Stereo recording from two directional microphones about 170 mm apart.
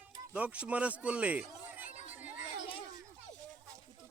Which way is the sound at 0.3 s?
5° right (ahead or behind).